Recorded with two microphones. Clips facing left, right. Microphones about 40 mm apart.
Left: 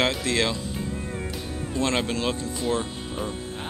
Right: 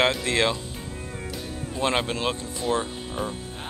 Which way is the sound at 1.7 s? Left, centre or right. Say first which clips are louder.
Even; centre.